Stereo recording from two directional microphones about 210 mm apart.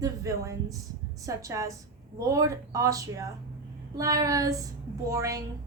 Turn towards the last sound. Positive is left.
turn(degrees=-15)  # may be behind; listen again after turning